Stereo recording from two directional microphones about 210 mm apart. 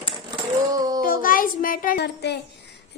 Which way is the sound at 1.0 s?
40° left (ahead or behind).